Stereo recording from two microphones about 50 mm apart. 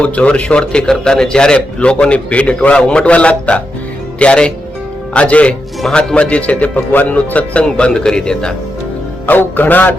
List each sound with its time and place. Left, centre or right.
0.0 s a man's voice: left
7.6 s speech: centre
9.2 s a man's voice: left